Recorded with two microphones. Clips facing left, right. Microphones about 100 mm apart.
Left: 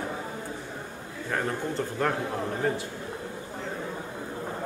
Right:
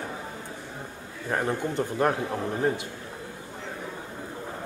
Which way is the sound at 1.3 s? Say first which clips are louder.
Right 2 dB; 20° right (ahead or behind).